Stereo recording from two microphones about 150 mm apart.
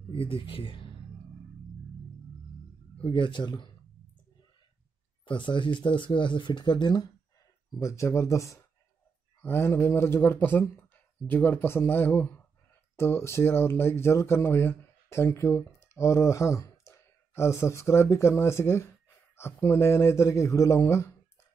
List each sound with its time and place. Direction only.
0.1 s speech: 35° left (ahead or behind)
3.0 s speech: 30° left (ahead or behind)
5.2 s speech: 35° left (ahead or behind); by 21.1 s 20° left (ahead or behind)